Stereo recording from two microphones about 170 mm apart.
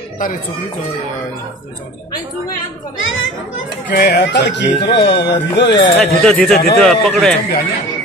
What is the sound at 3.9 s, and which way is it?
Speech, 85° left.